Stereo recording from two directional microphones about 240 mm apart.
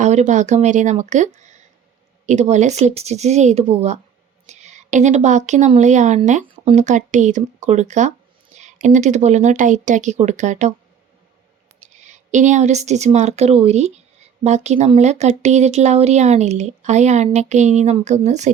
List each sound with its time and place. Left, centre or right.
0.0 s speech: right
11.8 s a woman's voice: right